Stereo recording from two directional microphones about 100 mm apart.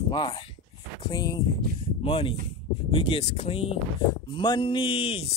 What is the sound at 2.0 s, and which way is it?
Speech, 65° left (ahead or behind).